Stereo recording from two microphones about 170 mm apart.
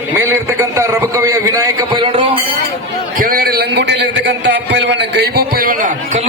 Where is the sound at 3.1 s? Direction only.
60° right (ahead or behind).